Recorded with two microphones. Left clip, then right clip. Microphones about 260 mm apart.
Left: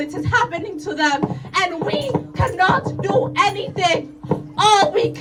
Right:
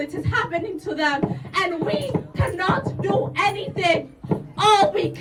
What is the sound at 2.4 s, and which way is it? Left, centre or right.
Speech, centre.